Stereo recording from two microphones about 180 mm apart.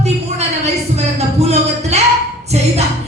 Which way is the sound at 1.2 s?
35° right (ahead or behind).